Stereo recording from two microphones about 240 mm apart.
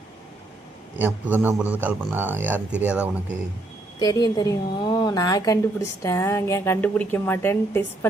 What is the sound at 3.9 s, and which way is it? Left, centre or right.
A woman's voice, centre.